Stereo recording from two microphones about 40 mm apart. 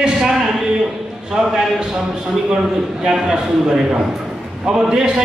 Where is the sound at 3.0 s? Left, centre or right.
Centre.